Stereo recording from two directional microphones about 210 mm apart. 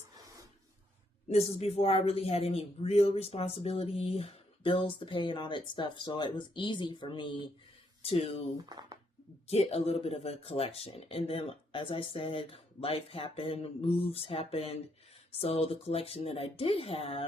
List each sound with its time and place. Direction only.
1.3 s speech: 30° left (ahead or behind)
8.5 s speech: 20° right (ahead or behind)
9.5 s speech: 30° left (ahead or behind)